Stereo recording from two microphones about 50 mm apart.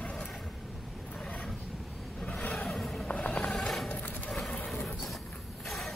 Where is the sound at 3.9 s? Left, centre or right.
Left.